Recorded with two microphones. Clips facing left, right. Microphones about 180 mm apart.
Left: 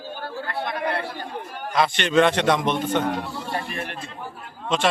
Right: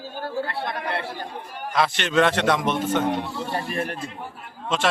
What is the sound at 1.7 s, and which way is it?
A man's voice, centre (ahead or behind).